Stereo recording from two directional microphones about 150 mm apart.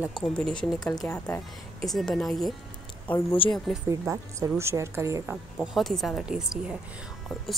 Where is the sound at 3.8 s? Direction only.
20° right (ahead or behind).